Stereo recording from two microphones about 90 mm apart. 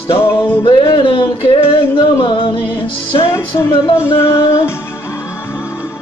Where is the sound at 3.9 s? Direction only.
30° left (ahead or behind).